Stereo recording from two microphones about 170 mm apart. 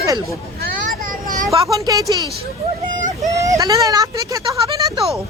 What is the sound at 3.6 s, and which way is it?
Speech, 20° right (ahead or behind).